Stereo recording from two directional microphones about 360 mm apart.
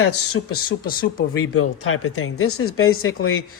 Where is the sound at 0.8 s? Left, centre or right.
Left.